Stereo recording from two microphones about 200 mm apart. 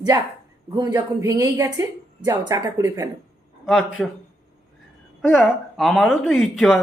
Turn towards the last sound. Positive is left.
turn(degrees=0)  # may be behind; listen again after turning